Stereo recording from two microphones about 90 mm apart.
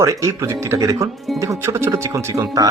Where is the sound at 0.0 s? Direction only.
35° right (ahead or behind).